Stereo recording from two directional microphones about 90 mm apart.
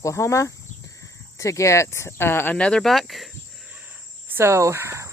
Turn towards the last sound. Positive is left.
turn(degrees=-30)  # may be behind; listen again after turning